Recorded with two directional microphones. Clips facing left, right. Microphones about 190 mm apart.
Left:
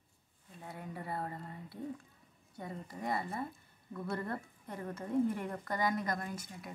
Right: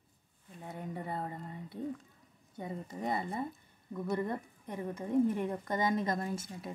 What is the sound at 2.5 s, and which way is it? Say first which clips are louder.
A woman's voice: right 3 dB; 20° right (ahead or behind).